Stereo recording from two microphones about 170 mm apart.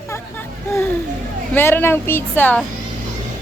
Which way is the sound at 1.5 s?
10° left (ahead or behind).